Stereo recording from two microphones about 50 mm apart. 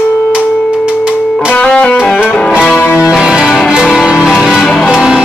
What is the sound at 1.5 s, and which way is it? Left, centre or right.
Music, centre.